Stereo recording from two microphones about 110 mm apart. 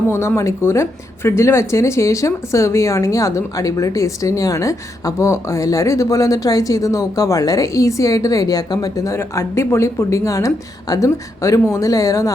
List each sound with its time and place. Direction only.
0.1 s speech: 25° left (ahead or behind)